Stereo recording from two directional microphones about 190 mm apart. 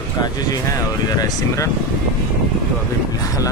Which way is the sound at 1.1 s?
20° left (ahead or behind).